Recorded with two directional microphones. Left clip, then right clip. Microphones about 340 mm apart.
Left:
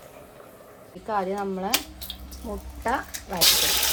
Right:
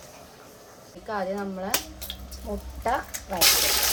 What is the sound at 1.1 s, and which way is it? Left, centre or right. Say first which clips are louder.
Speech: left 3 dB; left.